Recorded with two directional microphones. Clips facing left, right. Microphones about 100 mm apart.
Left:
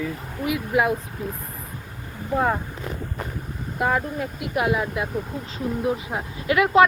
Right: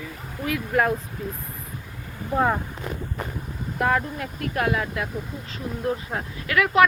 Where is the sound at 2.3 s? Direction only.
Centre (ahead or behind).